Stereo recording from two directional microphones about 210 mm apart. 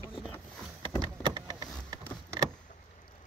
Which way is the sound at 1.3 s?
20° right (ahead or behind).